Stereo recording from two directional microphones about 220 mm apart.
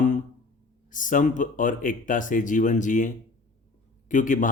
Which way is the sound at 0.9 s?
35° left (ahead or behind).